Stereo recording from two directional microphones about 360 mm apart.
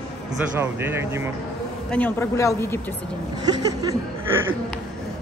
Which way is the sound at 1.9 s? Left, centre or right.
Centre.